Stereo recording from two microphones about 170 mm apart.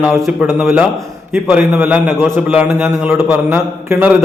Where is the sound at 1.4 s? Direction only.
10° right (ahead or behind).